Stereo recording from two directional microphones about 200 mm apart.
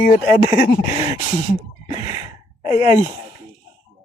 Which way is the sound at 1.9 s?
20° right (ahead or behind).